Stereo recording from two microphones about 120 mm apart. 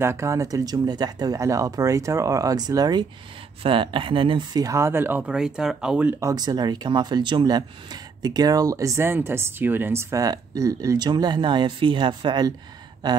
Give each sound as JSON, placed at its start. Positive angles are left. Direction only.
{"t": 0.0, "sound": "speech", "side_deg": -20}
{"t": 3.6, "sound": "speech", "side_deg": -45}
{"t": 4.6, "sound": "speech", "side_deg": -25}
{"t": 6.1, "sound": "speech", "side_deg": -30}